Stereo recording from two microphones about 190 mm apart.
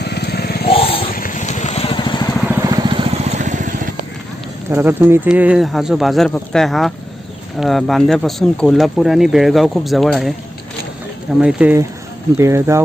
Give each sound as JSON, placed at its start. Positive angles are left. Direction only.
{"t": 0.0, "sound": "motorcycle", "side_deg": 60}
{"t": 0.7, "sound": "vehicle", "side_deg": 30}
{"t": 1.0, "sound": "vehicle", "side_deg": 45}
{"t": 2.6, "sound": "vehicle", "side_deg": -20}
{"t": 4.7, "sound": "speech", "side_deg": -10}
{"t": 11.3, "sound": "speech", "side_deg": -5}